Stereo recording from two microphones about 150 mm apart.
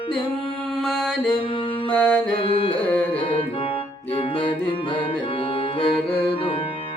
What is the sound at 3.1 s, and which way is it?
Music, 35° left (ahead or behind).